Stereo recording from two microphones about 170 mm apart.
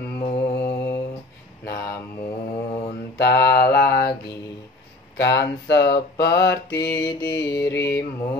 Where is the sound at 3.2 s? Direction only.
75° left (ahead or behind).